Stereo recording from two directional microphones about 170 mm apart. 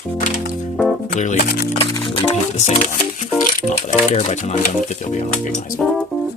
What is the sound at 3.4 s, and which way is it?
Speech, 45° left (ahead or behind).